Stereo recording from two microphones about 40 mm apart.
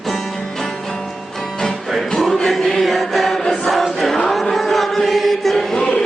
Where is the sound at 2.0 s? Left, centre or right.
Centre.